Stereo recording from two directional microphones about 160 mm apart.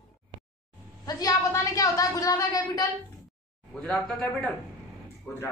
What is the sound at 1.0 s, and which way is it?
A woman's voice, 20° left (ahead or behind).